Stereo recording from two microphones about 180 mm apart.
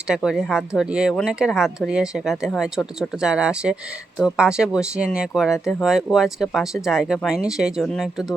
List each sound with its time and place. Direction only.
0.1 s speech: 5° right (ahead or behind)